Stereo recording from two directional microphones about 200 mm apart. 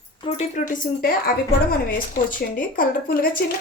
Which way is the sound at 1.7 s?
45° left (ahead or behind).